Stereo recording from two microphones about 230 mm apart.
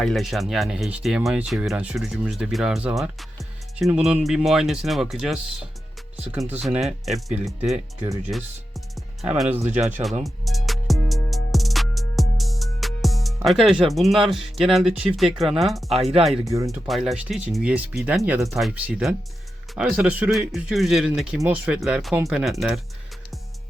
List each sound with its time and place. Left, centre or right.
0.0 s speech: centre
9.0 s music: centre
9.6 s speech: right
10.2 s music: centre
15.4 s speech: centre
15.9 s speech: right
16.4 s speech: centre
16.6 s speech: centre